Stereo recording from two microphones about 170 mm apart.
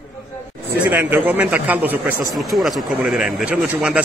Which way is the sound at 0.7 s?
10° right (ahead or behind).